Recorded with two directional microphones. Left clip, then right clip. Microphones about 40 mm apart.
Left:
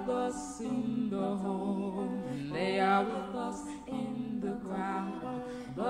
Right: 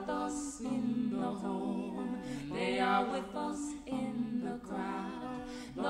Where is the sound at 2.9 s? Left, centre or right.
Right.